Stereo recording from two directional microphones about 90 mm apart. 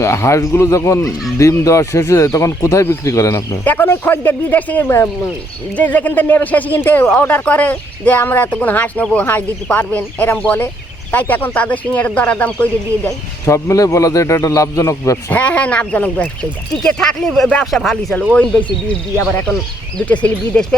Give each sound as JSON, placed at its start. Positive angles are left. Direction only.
{"t": 0.0, "sound": "speech", "side_deg": 30}
{"t": 3.6, "sound": "speech", "side_deg": 20}
{"t": 13.4, "sound": "speech", "side_deg": 35}
{"t": 15.3, "sound": "speech", "side_deg": 15}
{"t": 20.1, "sound": "speech", "side_deg": 10}